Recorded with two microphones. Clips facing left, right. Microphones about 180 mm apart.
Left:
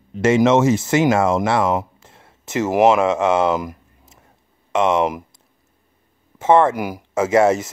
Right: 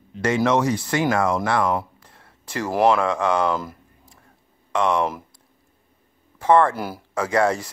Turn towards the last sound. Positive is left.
turn(degrees=20)  # may be behind; listen again after turning